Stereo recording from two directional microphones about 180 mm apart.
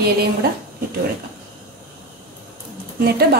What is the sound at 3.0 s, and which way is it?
Speech, 60° right (ahead or behind).